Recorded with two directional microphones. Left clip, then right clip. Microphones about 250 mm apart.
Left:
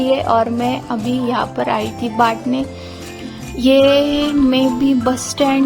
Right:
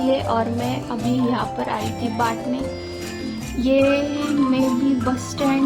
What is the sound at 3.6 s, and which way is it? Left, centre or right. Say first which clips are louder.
Music: left 7 dB; left.